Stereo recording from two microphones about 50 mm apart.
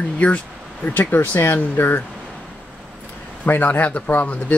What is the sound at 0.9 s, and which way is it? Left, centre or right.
Speech, left.